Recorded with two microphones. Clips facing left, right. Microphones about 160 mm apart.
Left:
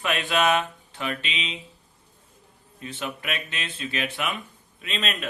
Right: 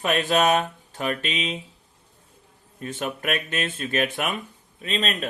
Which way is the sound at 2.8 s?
45° right (ahead or behind).